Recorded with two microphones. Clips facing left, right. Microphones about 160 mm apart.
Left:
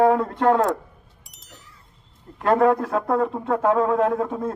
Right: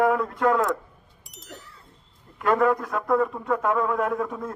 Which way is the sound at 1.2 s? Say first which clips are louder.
Right 6 dB; centre (ahead or behind).